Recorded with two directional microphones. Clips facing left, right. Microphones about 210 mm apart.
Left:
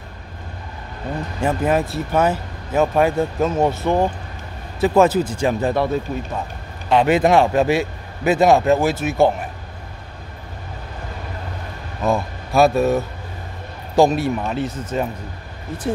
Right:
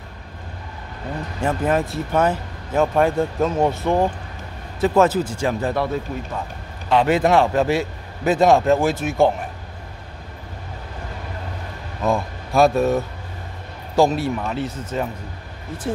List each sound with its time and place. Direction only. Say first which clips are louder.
1.4 s speech: left 1 dB; 10° left (ahead or behind)
4.7 s a man's voice: left 2 dB; 10° left (ahead or behind)
6.9 s a man's voice: left 2 dB; 15° left (ahead or behind)
12.0 s speech: left 1 dB; 5° left (ahead or behind)
13.9 s a man's voice: left 2 dB; 15° left (ahead or behind)